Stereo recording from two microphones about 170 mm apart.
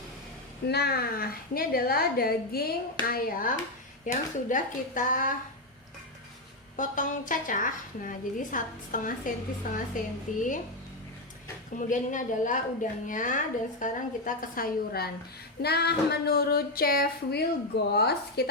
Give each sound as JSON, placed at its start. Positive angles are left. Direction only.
{"t": 0.7, "sound": "a woman's voice", "side_deg": 70}
{"t": 6.7, "sound": "a woman's voice", "side_deg": 50}
{"t": 11.8, "sound": "a woman's voice", "side_deg": 50}
{"t": 15.6, "sound": "a sound", "side_deg": 70}